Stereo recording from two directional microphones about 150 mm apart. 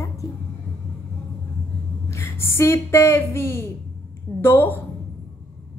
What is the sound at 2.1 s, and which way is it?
A woman's voice, 20° left (ahead or behind).